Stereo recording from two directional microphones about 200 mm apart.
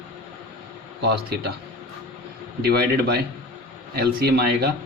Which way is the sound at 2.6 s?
50° right (ahead or behind).